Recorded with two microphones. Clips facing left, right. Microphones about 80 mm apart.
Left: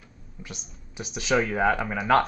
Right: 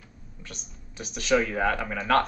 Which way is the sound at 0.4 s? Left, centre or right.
Centre.